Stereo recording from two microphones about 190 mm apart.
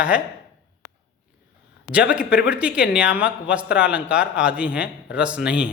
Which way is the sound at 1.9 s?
5° right (ahead or behind).